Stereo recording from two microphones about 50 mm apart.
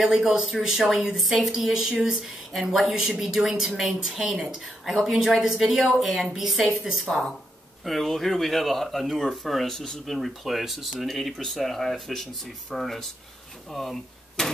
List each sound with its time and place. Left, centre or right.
0.0 s a woman's voice: centre
4.2 s a woman's voice: centre
4.8 s a woman's voice: centre